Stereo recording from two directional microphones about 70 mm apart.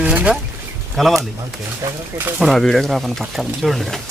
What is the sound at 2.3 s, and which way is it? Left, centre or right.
Speech, centre.